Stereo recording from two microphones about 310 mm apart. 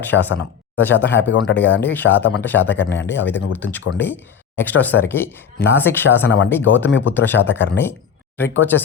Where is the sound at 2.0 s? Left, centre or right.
Left.